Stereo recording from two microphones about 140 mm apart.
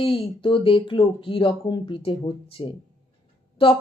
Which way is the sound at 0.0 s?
40° left (ahead or behind).